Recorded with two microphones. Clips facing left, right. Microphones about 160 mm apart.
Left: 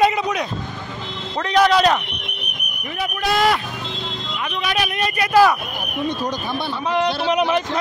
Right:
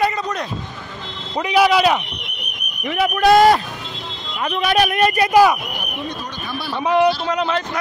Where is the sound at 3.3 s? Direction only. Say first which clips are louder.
Right 7 dB; 40° right (ahead or behind).